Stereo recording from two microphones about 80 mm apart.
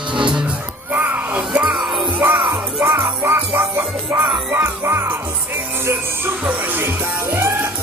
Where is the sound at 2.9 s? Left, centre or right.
Right.